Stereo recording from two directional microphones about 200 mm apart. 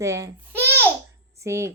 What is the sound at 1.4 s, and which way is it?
Speech, 15° right (ahead or behind).